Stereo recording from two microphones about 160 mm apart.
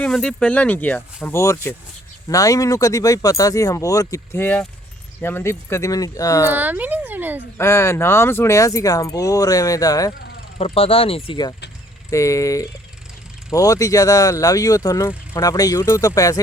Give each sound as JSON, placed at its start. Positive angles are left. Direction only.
{"t": 0.0, "sound": "speech", "side_deg": 5}
{"t": 6.5, "sound": "speech", "side_deg": -10}
{"t": 7.6, "sound": "speech", "side_deg": 15}
{"t": 10.6, "sound": "speech", "side_deg": 35}
{"t": 12.1, "sound": "speech", "side_deg": 20}